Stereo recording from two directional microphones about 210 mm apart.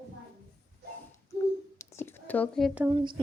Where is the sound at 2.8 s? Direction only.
20° right (ahead or behind).